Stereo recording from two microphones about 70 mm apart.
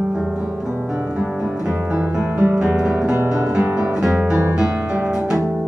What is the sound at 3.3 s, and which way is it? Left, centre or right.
Music, centre.